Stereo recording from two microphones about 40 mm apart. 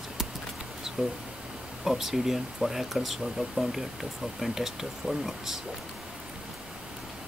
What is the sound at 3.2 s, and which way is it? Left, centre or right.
Speech, right.